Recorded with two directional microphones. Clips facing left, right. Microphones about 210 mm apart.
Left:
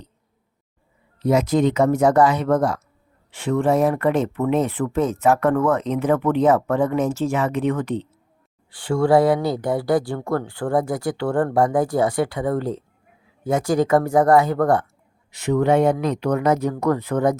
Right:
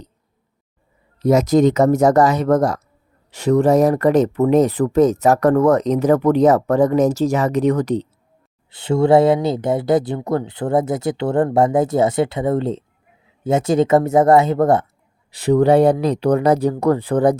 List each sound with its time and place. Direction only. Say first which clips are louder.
1.2 s speech: right 4 dB; 40° right (ahead or behind)
8.7 s speech: right 3 dB; 25° right (ahead or behind)
15.3 s speech: right 5 dB; 35° right (ahead or behind)